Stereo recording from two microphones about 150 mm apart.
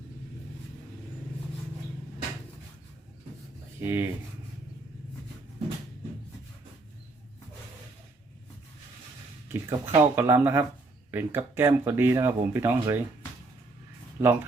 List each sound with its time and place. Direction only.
3.8 s speech: 15° right (ahead or behind)
9.5 s speech: 15° right (ahead or behind)
14.2 s speech: 15° right (ahead or behind)